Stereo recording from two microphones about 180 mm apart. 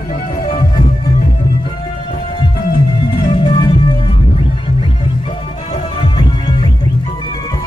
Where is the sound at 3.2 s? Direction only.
25° left (ahead or behind).